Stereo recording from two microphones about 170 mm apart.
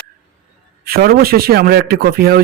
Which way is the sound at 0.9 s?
65° right (ahead or behind).